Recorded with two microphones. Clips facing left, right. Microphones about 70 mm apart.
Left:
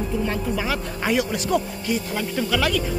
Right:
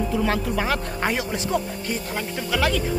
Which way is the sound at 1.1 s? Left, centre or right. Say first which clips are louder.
Left 3 dB; right.